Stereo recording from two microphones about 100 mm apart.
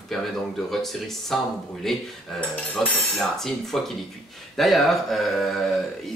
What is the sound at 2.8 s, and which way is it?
Speech, centre (ahead or behind).